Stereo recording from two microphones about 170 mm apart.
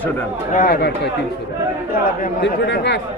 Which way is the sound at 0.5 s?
55° left (ahead or behind).